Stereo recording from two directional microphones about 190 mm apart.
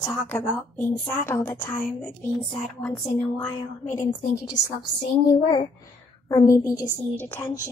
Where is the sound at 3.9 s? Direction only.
20° left (ahead or behind).